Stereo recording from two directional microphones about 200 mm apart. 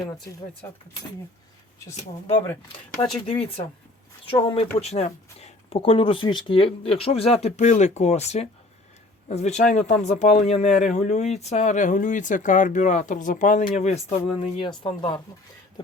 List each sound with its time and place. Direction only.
0.0 s speech: 15° left (ahead or behind)
3.0 s speech: 30° left (ahead or behind)